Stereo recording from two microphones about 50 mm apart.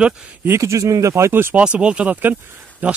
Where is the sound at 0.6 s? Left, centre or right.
Right.